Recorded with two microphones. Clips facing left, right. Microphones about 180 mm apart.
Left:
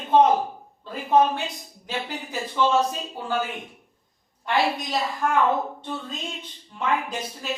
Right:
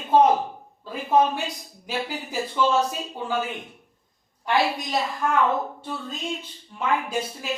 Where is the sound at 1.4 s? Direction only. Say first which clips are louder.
Right 1 dB; 5° right (ahead or behind).